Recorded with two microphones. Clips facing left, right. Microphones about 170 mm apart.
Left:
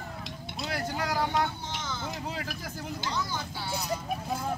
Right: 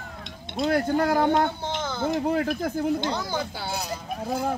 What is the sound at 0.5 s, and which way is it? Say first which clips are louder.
Speech: right 11 dB; 55° right (ahead or behind).